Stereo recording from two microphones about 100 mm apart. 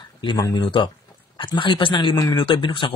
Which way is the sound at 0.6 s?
60° left (ahead or behind).